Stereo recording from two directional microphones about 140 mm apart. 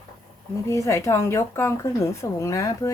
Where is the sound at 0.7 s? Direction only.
20° left (ahead or behind).